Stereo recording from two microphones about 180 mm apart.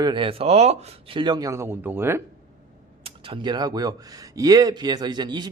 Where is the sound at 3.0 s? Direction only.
30° right (ahead or behind).